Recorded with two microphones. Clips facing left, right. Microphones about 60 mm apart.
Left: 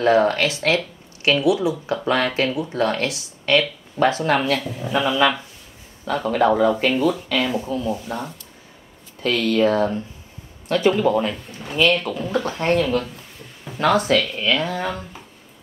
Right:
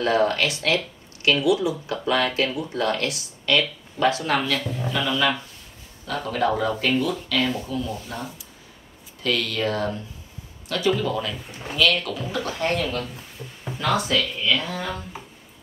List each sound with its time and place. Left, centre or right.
0.0 s speech: left
2.0 s speech: left
9.2 s speech: left